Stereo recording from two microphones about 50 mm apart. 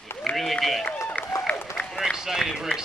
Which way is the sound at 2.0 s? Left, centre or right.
Centre.